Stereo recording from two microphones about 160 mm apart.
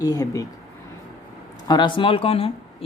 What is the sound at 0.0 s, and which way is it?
Speech, 20° left (ahead or behind).